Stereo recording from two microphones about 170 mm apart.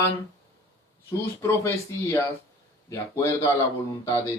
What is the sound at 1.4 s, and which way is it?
Speech, 15° left (ahead or behind).